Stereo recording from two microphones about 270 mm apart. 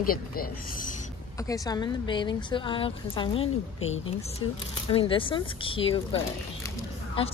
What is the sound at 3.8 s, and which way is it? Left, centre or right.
Speech, left.